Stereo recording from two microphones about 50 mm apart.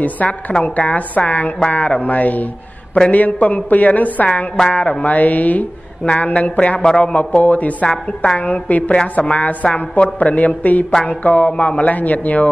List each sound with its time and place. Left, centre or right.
0.0 s a woman's voice: left